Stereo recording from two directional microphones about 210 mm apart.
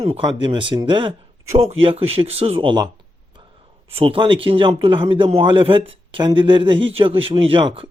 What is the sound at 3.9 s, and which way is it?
A man's voice, 25° right (ahead or behind).